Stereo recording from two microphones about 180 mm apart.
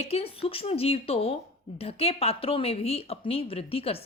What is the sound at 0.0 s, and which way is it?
Speech, 35° left (ahead or behind).